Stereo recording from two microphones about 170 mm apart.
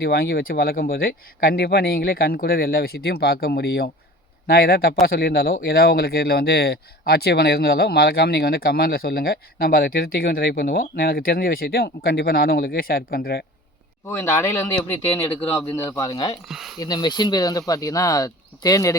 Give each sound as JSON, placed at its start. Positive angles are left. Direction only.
{"t": 0.0, "sound": "speech", "side_deg": 65}
{"t": 15.4, "sound": "speech", "side_deg": 15}
{"t": 16.5, "sound": "speech", "side_deg": 0}
{"t": 16.8, "sound": "speech", "side_deg": 25}